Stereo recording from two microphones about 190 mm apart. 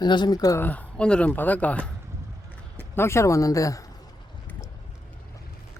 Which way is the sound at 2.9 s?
15° left (ahead or behind).